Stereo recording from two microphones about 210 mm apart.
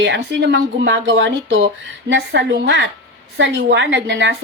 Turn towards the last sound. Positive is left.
turn(degrees=-55)  # may be behind; listen again after turning